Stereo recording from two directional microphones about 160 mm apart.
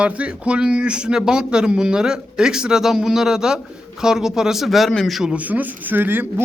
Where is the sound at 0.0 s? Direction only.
10° right (ahead or behind).